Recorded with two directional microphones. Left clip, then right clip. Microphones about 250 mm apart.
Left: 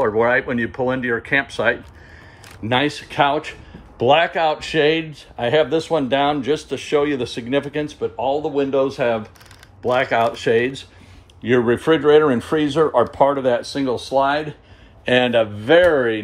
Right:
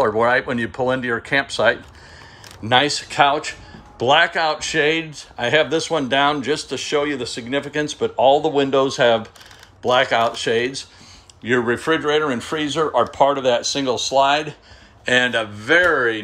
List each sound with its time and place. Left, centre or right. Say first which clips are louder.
0.0 s speech: even; centre
8.0 s speech: right 7 dB; centre